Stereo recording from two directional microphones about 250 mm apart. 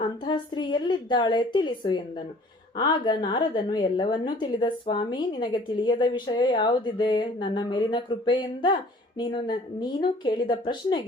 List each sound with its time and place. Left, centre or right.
0.0 s a woman's voice: centre